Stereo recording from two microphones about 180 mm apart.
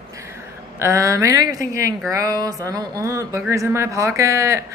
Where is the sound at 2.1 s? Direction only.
20° right (ahead or behind).